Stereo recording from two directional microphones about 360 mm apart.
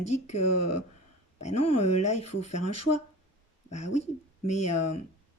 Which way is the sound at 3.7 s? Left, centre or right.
Centre.